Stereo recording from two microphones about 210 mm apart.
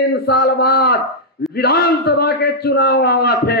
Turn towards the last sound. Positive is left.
turn(degrees=50)  # may be behind; listen again after turning